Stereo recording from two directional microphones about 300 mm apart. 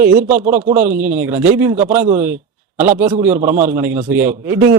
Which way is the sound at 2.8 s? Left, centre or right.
Right.